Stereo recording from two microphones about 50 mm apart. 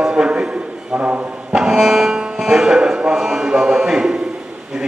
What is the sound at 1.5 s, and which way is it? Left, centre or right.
Music, centre.